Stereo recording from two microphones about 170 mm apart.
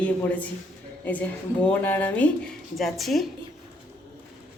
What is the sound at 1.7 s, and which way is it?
A woman's voice, 10° left (ahead or behind).